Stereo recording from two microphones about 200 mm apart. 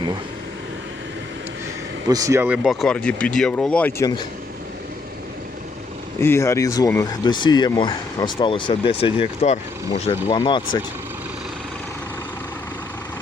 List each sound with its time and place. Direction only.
2.0 s speech: 15° right (ahead or behind)
2.6 s speech: centre (ahead or behind); by 4.3 s 20° left (ahead or behind)
6.1 s speech: 15° left (ahead or behind)